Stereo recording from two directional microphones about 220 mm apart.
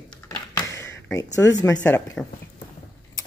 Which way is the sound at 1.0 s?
15° left (ahead or behind).